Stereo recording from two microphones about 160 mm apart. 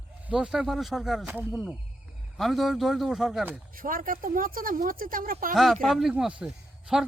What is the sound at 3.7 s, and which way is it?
Speech, 60° right (ahead or behind).